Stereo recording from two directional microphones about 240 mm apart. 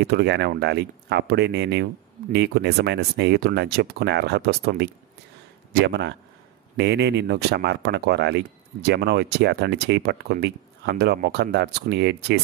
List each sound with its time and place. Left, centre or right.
0.0 s speech: right